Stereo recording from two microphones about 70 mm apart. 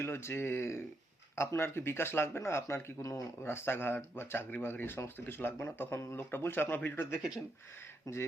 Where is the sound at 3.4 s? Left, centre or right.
Left.